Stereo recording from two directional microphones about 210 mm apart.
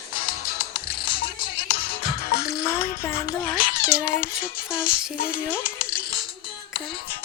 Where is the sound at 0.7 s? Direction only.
25° left (ahead or behind).